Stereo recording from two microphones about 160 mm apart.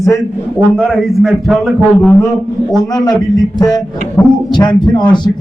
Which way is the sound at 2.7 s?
25° left (ahead or behind).